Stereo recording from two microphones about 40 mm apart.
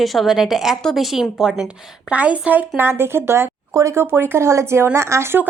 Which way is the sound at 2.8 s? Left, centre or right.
Right.